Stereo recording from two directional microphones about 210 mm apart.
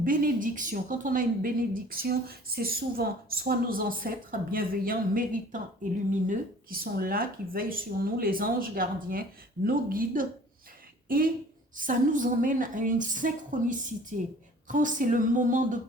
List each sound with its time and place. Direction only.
0.0 s a woman's voice: 40° right (ahead or behind)
11.8 s a woman's voice: 40° right (ahead or behind)